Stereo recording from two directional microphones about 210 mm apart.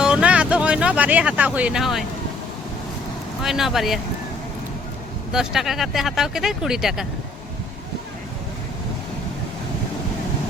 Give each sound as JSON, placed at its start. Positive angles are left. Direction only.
{"t": 0.0, "sound": "speech", "side_deg": -5}
{"t": 3.4, "sound": "speech", "side_deg": 0}
{"t": 5.3, "sound": "speech", "side_deg": 0}